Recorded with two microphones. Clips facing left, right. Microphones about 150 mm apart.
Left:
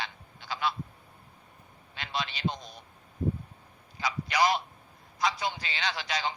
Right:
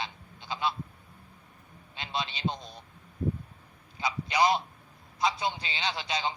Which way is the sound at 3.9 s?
25° right (ahead or behind).